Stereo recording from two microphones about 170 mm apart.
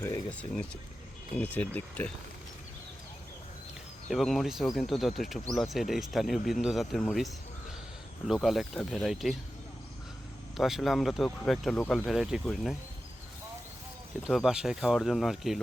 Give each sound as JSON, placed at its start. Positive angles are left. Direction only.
{"t": 0.0, "sound": "speech", "side_deg": 10}
{"t": 4.1, "sound": "speech", "side_deg": 0}
{"t": 8.3, "sound": "speech", "side_deg": 0}
{"t": 10.6, "sound": "speech", "side_deg": 0}
{"t": 14.3, "sound": "speech", "side_deg": -5}